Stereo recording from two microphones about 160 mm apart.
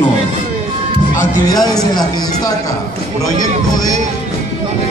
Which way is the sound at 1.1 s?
50° left (ahead or behind).